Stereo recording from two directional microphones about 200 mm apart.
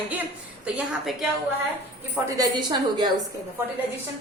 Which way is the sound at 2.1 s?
20° right (ahead or behind).